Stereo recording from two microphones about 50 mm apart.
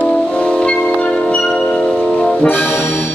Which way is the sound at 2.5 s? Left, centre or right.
Left.